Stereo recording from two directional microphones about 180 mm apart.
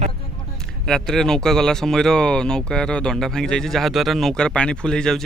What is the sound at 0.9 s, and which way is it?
Speech, 5° left (ahead or behind).